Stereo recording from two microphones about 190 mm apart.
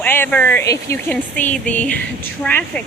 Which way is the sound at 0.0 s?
10° left (ahead or behind).